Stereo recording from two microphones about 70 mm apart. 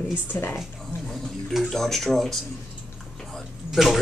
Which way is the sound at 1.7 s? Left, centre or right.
Centre.